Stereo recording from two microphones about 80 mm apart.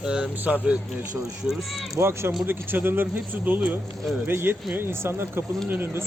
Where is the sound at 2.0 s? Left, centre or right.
Right.